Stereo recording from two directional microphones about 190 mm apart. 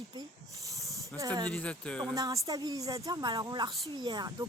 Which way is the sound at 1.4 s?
5° left (ahead or behind).